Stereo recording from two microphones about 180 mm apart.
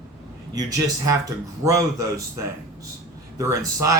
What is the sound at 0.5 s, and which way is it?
Speech, 20° right (ahead or behind).